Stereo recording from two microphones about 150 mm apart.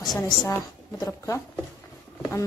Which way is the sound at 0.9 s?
20° left (ahead or behind).